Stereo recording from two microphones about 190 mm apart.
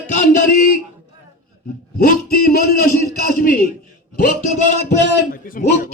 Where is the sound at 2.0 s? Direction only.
50° left (ahead or behind).